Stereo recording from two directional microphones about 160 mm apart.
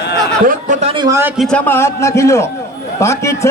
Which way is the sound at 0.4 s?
45° right (ahead or behind).